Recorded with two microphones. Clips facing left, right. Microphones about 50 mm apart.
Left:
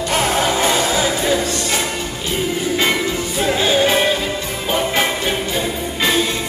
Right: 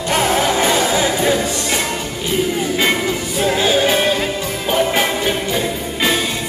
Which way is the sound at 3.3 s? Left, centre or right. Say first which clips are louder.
Right 1 dB; centre.